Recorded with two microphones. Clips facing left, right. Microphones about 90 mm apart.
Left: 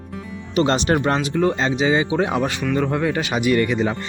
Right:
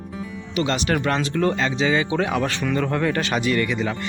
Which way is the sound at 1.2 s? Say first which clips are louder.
Left 2 dB; 15° left (ahead or behind).